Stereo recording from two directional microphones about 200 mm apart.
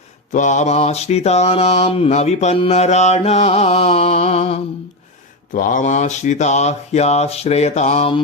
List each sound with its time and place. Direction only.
0.3 s mantra: 40° left (ahead or behind)
5.5 s mantra: 40° left (ahead or behind)